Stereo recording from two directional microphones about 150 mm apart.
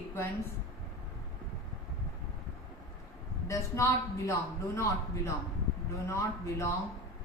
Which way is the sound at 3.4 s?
20° left (ahead or behind).